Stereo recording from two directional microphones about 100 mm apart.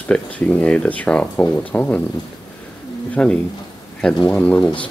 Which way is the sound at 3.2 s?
10° left (ahead or behind).